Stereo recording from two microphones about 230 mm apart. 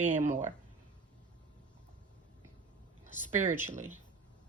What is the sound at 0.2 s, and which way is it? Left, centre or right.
Speech, right.